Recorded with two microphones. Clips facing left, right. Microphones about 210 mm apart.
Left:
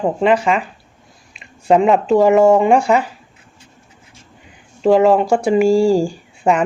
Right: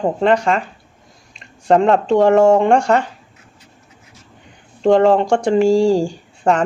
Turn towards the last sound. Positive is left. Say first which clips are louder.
# even
turn(degrees=5)  # may be behind; listen again after turning